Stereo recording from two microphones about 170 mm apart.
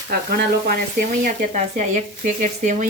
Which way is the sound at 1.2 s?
50° right (ahead or behind).